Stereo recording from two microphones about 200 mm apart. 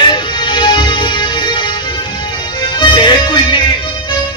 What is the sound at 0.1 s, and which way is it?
Music, 25° left (ahead or behind).